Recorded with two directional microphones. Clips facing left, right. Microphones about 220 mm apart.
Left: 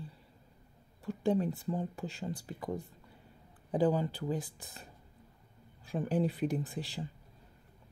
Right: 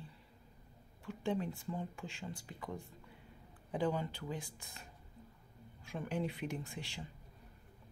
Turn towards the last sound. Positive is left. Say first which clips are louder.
# left 8 dB
turn(degrees=35)  # may be behind; listen again after turning